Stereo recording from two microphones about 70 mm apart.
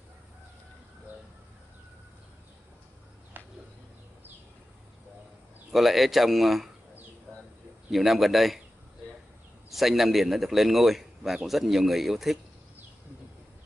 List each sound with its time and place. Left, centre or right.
3.4 s a sound: right
5.7 s a man's voice: centre
7.9 s a man's voice: centre
9.7 s a man's voice: centre